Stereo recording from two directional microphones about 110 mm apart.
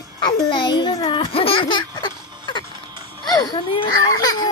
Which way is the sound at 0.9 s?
55° left (ahead or behind).